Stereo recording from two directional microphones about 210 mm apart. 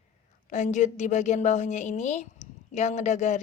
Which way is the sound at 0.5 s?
35° left (ahead or behind).